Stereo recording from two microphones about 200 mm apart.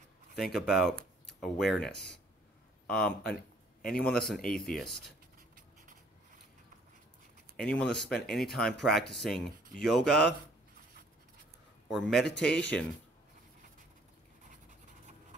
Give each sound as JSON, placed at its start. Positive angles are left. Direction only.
{"t": 0.4, "sound": "speech", "side_deg": 0}
{"t": 7.5, "sound": "speech", "side_deg": 5}
{"t": 11.9, "sound": "speech", "side_deg": 0}
{"t": 14.5, "sound": "writing", "side_deg": -40}